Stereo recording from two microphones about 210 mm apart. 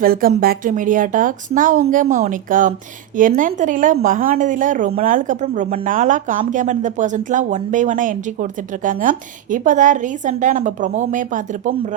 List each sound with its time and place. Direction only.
0.0 s a woman's voice: 45° right (ahead or behind)